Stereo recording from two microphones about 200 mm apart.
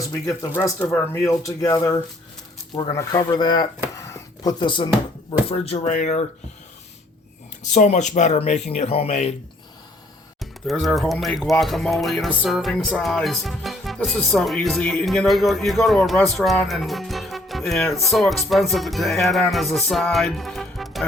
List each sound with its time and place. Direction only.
0.0 s speech: 15° left (ahead or behind)
4.1 s a sound: 20° left (ahead or behind)
5.5 s speech: 30° left (ahead or behind)
7.6 s speech: 35° left (ahead or behind)
10.4 s speech: centre (ahead or behind)